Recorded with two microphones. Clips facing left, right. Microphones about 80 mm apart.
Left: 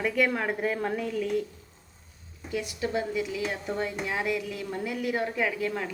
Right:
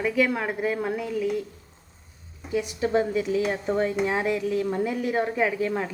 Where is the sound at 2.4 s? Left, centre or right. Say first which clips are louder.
Right 5 dB; right.